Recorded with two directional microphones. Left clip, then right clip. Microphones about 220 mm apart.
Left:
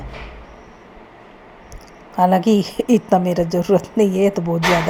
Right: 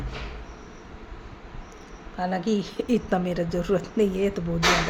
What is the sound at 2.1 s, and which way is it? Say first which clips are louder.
A woman's voice: left 12 dB; 30° left (ahead or behind).